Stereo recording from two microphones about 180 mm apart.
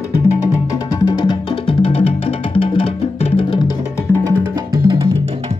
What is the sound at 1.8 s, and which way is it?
Music, 30° left (ahead or behind).